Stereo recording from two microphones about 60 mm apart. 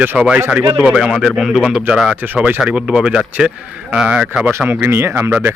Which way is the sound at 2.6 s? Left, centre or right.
Centre.